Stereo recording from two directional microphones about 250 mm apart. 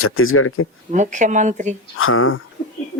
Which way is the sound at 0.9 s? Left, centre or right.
Right.